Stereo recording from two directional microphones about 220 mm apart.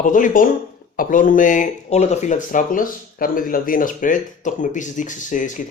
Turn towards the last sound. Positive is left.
turn(degrees=35)  # may be behind; listen again after turning